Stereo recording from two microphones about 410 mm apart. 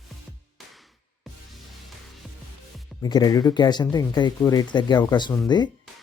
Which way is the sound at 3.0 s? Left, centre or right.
Centre.